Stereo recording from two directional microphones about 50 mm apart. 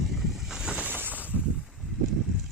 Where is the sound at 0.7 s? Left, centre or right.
Right.